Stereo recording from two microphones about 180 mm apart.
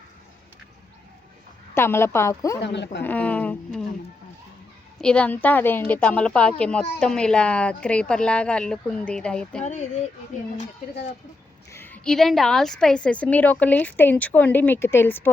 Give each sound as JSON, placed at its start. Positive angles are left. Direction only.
{"t": 1.7, "sound": "a woman's voice", "side_deg": 15}
{"t": 2.6, "sound": "a woman's voice", "side_deg": 75}
{"t": 3.0, "sound": "a woman's voice", "side_deg": 10}
{"t": 4.9, "sound": "a woman's voice", "side_deg": 5}
{"t": 11.7, "sound": "a woman's voice", "side_deg": 10}